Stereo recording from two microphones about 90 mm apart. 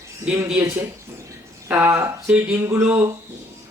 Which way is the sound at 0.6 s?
40° right (ahead or behind).